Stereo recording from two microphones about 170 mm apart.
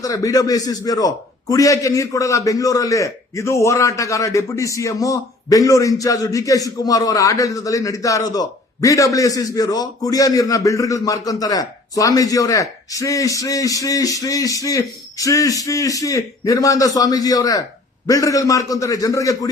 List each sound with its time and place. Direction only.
0.0 s a man's voice: 20° left (ahead or behind)